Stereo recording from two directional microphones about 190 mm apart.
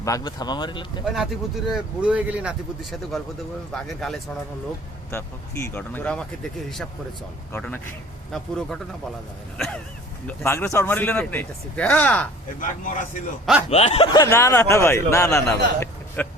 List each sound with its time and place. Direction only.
0.0 s speech: 20° left (ahead or behind)
1.7 s speech: 5° right (ahead or behind)
5.1 s speech: 15° left (ahead or behind)
7.5 s speech: 10° left (ahead or behind)
12.5 s a man's voice: 45° left (ahead or behind); by 16.2 s 10° left (ahead or behind)